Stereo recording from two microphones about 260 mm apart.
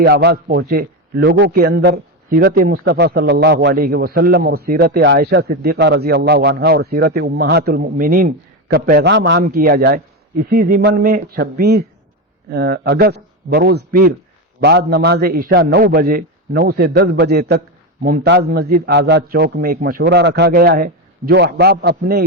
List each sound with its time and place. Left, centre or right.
0.0 s a man's voice: right